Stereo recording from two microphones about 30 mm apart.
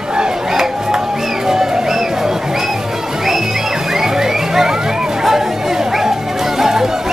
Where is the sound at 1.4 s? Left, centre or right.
Centre.